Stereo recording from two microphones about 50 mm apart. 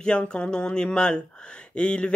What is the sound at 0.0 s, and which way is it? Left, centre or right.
Speech, centre.